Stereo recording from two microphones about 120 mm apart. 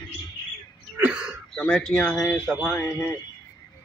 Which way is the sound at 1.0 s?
10° right (ahead or behind).